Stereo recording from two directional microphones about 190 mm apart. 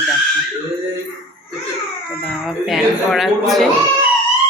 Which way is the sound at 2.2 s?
Centre (ahead or behind).